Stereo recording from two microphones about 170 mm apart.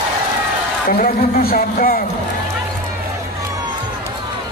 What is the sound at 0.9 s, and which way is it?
A man's voice, 55° left (ahead or behind).